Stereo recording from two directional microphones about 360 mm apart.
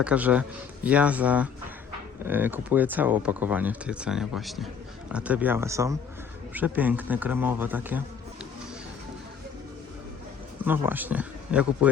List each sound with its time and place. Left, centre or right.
0.0 s speech: centre
10.6 s speech: centre